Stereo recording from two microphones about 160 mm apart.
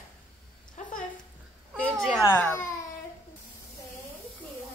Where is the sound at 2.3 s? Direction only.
15° left (ahead or behind).